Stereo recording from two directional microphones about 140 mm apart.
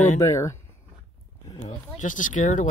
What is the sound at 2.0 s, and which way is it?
Speech, 65° left (ahead or behind).